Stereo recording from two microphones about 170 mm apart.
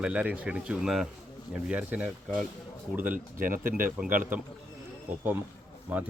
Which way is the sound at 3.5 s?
55° right (ahead or behind).